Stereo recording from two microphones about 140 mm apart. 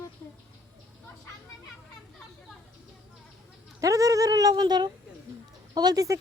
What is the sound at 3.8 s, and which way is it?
Speech, 25° right (ahead or behind).